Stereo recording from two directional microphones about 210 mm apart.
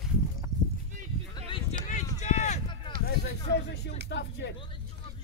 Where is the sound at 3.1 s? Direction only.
50° left (ahead or behind).